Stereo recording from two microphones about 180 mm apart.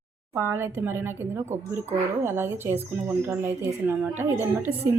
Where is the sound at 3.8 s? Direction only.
10° right (ahead or behind).